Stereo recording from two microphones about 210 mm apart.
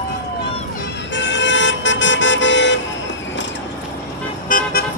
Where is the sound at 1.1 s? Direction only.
60° left (ahead or behind).